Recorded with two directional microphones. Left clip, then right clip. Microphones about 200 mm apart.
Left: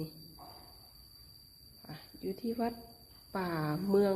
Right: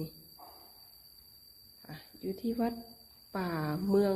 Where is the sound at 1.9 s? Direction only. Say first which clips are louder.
Right 1 dB; centre (ahead or behind).